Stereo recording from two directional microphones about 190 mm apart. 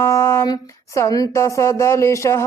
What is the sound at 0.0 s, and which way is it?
Speech, 15° left (ahead or behind).